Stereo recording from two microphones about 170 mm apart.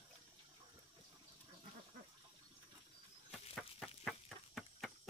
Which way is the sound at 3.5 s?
Centre (ahead or behind).